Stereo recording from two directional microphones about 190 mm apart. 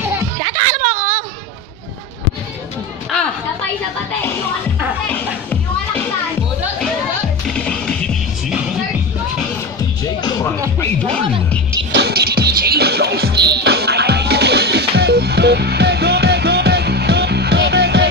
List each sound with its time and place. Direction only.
0.4 s a sound: 35° right (ahead or behind)
7.4 s music: 5° left (ahead or behind)
10.8 s music: 5° left (ahead or behind)
11.9 s music: 60° right (ahead or behind)